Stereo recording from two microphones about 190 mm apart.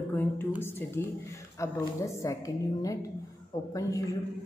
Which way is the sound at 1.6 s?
15° left (ahead or behind).